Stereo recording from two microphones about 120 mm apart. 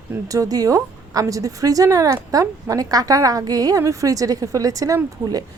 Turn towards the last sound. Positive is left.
turn(degrees=-30)  # may be behind; listen again after turning